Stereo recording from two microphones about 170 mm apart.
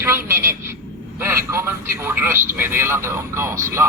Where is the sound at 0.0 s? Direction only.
15° right (ahead or behind).